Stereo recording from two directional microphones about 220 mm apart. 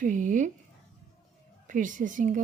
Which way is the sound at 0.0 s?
35° right (ahead or behind).